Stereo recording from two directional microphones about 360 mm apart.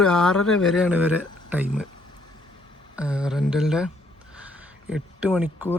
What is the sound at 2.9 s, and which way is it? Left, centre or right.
Speech, centre.